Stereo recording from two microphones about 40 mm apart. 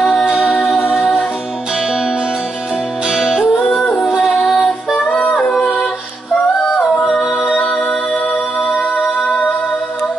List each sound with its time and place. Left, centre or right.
3.1 s music: centre
4.6 s music: left
6.6 s singing: centre
7.1 s music: centre